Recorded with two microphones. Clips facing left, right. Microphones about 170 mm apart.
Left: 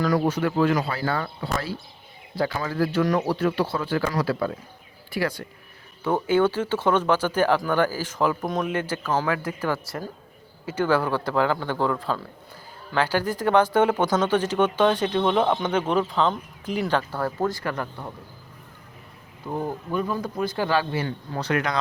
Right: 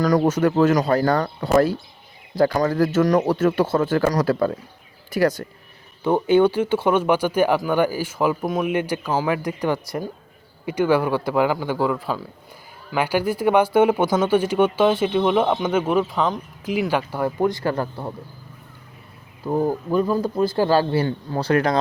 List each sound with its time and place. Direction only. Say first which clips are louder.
0.0 s speech: right 5 dB; 40° right (ahead or behind)
6.0 s speech: right 4 dB; 15° right (ahead or behind)
17.6 s speech: right 6 dB; 30° right (ahead or behind)
19.5 s speech: right 7 dB; 40° right (ahead or behind)